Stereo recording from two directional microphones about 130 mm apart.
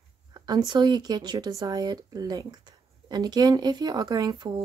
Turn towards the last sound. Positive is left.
turn(degrees=-35)  # may be behind; listen again after turning